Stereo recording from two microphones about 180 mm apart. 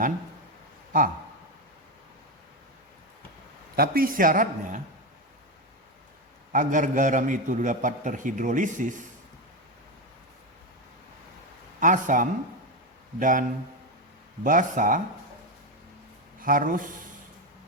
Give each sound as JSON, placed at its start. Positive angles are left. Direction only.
{"t": 3.8, "sound": "a man's voice", "side_deg": -55}
{"t": 6.5, "sound": "a man's voice", "side_deg": -45}
{"t": 11.8, "sound": "a man's voice", "side_deg": -45}
{"t": 14.4, "sound": "a man's voice", "side_deg": -50}
{"t": 16.4, "sound": "a man's voice", "side_deg": -50}